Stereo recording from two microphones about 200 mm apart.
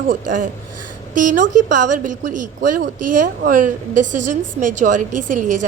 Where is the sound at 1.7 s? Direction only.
40° right (ahead or behind).